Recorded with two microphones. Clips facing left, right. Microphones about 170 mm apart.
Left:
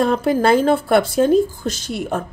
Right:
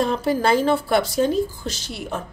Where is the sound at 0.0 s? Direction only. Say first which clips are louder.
Left 4 dB; 50° left (ahead or behind).